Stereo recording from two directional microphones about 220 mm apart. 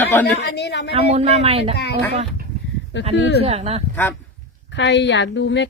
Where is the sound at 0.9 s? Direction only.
30° right (ahead or behind).